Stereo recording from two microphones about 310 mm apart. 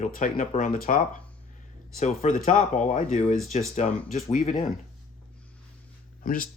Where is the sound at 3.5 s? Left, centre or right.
Left.